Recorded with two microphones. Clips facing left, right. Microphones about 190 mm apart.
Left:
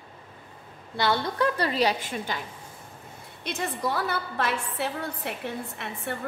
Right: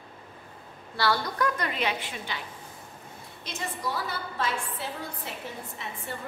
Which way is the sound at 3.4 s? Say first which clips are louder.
Left 5 dB; 60° left (ahead or behind).